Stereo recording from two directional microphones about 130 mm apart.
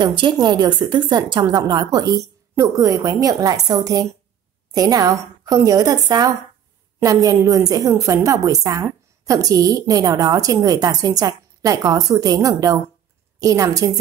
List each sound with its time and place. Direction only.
0.0 s a woman's voice: 40° right (ahead or behind)